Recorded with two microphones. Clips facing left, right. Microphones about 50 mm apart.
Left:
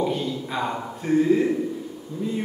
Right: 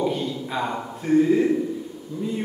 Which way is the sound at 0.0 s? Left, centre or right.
Centre.